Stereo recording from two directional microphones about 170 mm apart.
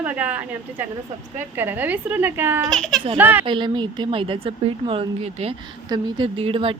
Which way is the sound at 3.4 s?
30° right (ahead or behind).